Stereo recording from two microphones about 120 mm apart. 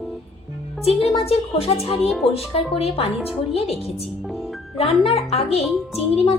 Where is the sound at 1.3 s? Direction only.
55° left (ahead or behind).